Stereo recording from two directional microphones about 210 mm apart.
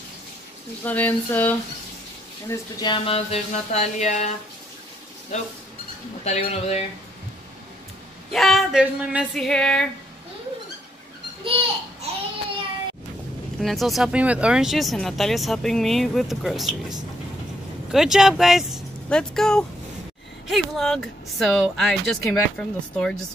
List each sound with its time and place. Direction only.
0.8 s speech: 10° left (ahead or behind); by 4.3 s 35° left (ahead or behind)
6.2 s speech: 30° left (ahead or behind)
8.3 s speech: centre (ahead or behind)
11.4 s babbling: 25° right (ahead or behind)
13.6 s speech: centre (ahead or behind)
17.9 s speech: centre (ahead or behind)